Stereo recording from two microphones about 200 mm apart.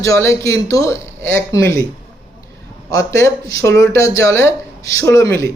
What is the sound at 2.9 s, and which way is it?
Speech, 15° left (ahead or behind).